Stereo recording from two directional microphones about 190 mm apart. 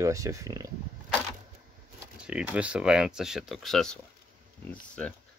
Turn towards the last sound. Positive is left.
turn(degrees=5)  # may be behind; listen again after turning